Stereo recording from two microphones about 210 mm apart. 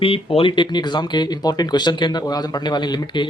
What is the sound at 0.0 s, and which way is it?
Speech, 25° left (ahead or behind).